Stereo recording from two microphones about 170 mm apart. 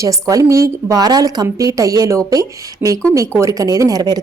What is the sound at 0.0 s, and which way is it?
Speech, 20° right (ahead or behind).